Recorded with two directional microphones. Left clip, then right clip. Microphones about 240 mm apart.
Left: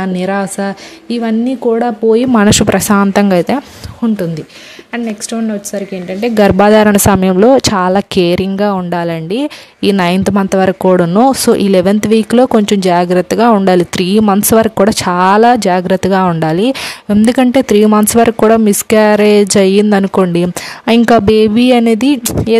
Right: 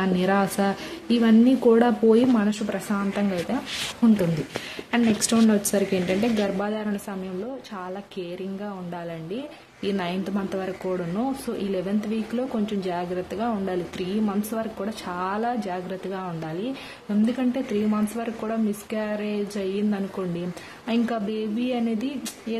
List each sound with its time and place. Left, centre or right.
0.0 s a woman's voice: left
2.3 s speech: left
4.9 s speech: centre
6.2 s speech: left